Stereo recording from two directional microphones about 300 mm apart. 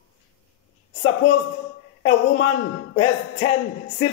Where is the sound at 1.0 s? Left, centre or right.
Left.